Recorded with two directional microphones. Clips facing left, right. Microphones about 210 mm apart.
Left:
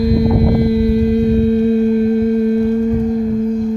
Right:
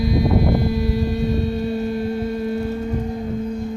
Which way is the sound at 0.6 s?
60° left (ahead or behind).